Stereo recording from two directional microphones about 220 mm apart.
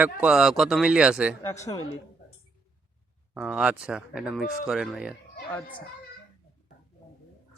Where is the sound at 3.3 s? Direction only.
5° right (ahead or behind).